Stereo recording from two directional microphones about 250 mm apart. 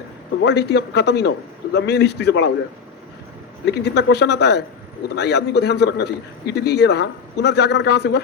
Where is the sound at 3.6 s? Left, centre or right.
Left.